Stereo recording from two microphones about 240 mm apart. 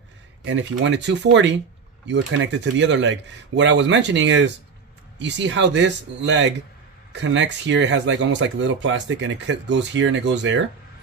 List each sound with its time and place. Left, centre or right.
0.4 s speech: right